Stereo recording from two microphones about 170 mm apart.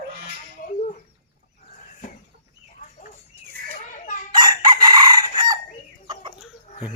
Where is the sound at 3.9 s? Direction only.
45° left (ahead or behind).